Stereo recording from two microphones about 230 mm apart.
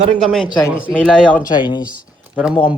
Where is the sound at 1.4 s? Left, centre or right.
Centre.